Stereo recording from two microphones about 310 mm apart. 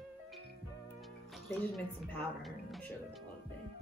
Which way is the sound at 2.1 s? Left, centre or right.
Centre.